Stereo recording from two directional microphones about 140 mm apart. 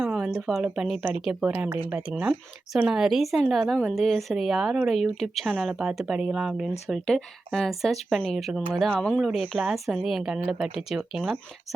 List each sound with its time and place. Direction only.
0.0 s speech: 10° right (ahead or behind)